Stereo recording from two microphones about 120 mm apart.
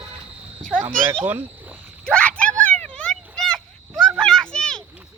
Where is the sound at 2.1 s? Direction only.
10° left (ahead or behind).